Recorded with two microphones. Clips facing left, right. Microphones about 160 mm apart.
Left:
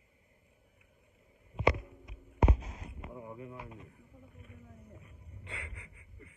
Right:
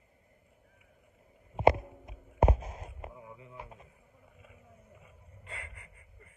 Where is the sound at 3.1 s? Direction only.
25° left (ahead or behind).